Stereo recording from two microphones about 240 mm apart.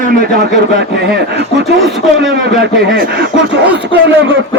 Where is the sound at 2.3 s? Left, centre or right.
Right.